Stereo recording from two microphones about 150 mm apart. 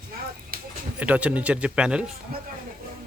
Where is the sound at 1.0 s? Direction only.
10° right (ahead or behind).